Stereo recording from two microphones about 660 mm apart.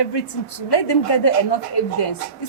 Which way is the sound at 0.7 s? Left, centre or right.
Left.